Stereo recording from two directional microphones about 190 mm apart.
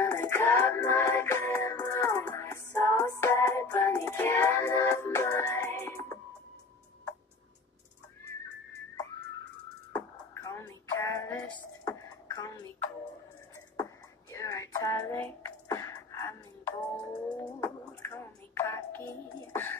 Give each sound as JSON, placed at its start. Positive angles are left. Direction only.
{"t": 0.0, "sound": "music", "side_deg": 15}
{"t": 9.9, "sound": "music", "side_deg": 15}
{"t": 14.3, "sound": "music", "side_deg": 15}